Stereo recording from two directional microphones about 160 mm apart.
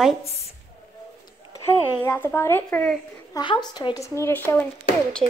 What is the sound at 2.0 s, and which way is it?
Speech, 15° left (ahead or behind).